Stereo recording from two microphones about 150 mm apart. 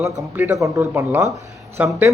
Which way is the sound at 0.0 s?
15° right (ahead or behind).